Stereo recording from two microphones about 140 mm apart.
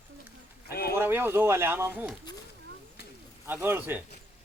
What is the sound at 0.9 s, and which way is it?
Speech, 15° right (ahead or behind).